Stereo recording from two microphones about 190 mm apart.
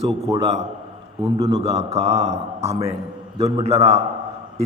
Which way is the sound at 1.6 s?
35° right (ahead or behind).